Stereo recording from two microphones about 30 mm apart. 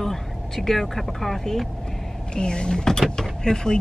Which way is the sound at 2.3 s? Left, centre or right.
Left.